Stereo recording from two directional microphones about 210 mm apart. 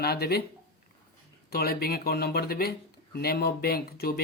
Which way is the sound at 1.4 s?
45° left (ahead or behind).